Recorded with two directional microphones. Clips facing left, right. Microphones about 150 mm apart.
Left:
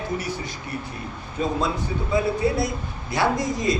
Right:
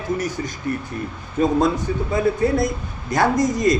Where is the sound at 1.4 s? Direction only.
50° right (ahead or behind).